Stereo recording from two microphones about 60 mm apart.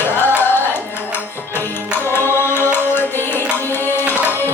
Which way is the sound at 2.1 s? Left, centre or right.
Left.